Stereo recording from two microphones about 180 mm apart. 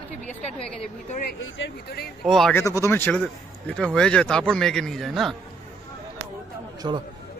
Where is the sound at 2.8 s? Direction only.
10° left (ahead or behind).